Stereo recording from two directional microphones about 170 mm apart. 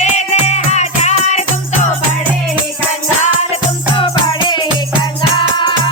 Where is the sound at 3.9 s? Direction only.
30° left (ahead or behind).